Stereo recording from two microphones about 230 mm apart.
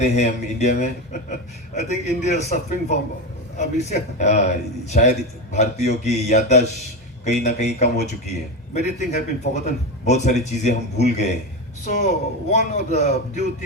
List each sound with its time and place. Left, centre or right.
0.0 s a man's voice: left